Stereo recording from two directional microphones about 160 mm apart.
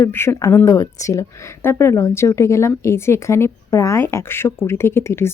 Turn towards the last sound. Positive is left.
turn(degrees=15)  # may be behind; listen again after turning